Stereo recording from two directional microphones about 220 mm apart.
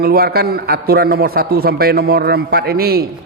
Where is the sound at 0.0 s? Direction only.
45° right (ahead or behind).